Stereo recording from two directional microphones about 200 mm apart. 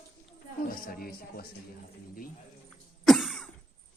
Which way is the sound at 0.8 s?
45° left (ahead or behind).